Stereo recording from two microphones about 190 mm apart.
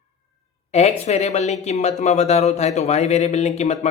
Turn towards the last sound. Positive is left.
turn(degrees=35)  # may be behind; listen again after turning